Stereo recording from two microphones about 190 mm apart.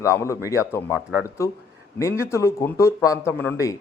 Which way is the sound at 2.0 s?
15° left (ahead or behind).